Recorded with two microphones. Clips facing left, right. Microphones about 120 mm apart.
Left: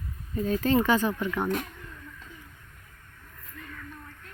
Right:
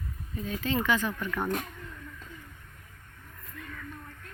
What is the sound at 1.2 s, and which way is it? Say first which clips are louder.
Speech: left 3 dB; 15° left (ahead or behind).